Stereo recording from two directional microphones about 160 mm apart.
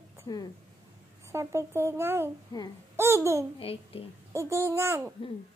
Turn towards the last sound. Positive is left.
turn(degrees=-15)  # may be behind; listen again after turning